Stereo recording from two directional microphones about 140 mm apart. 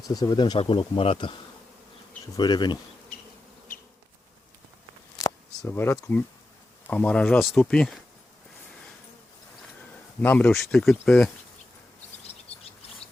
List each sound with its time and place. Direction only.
0.1 s speech: 30° left (ahead or behind)
0.6 s speech: 40° left (ahead or behind)
2.3 s speech: 30° left (ahead or behind)
5.1 s a sound: 20° left (ahead or behind)
6.0 s speech: 15° left (ahead or behind)
10.2 s speech: 10° left (ahead or behind)